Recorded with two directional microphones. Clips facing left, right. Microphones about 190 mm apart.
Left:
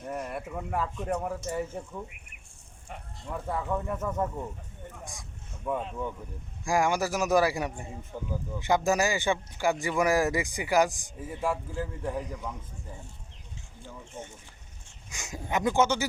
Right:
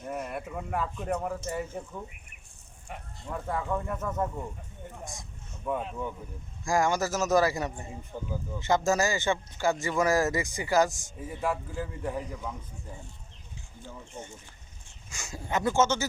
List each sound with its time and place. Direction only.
0.0 s speech: 5° right (ahead or behind)
3.2 s speech: centre (ahead or behind)
5.6 s speech: centre (ahead or behind)
6.7 s speech: 15° left (ahead or behind)
7.9 s speech: centre (ahead or behind)
8.5 s speech: 15° left (ahead or behind)
11.3 s speech: centre (ahead or behind)
15.1 s speech: 15° left (ahead or behind)